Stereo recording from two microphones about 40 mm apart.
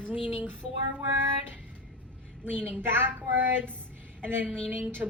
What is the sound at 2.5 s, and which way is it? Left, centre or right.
Speech, right.